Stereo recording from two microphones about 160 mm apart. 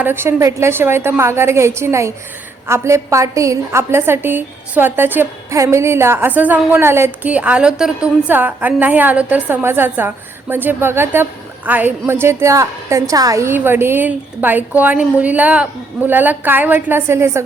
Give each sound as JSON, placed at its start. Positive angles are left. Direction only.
{"t": 0.0, "sound": "a woman's voice", "side_deg": -15}